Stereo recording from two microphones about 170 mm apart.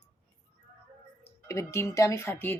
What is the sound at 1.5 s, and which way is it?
Speech, 15° left (ahead or behind).